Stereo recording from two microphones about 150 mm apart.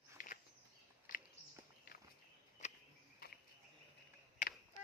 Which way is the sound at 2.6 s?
50° left (ahead or behind).